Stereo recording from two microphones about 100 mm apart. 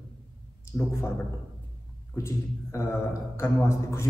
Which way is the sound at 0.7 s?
25° left (ahead or behind).